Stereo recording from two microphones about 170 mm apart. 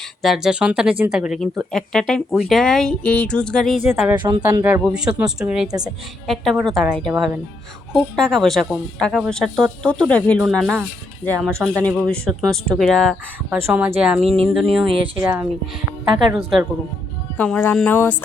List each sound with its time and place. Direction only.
0.2 s a woman's voice: centre (ahead or behind)
4.2 s speech: 25° right (ahead or behind)
4.8 s a woman's voice: 5° right (ahead or behind)
13.6 s a woman's voice: 10° right (ahead or behind)
15.2 s speech: 10° right (ahead or behind)
17.3 s speech: 10° left (ahead or behind)